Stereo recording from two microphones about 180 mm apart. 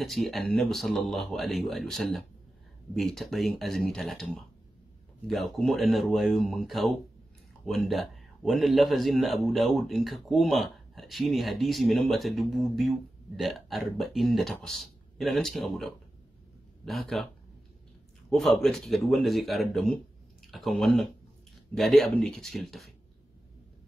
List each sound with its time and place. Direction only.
0.0 s a man's voice: centre (ahead or behind)
18.3 s a man's voice: centre (ahead or behind)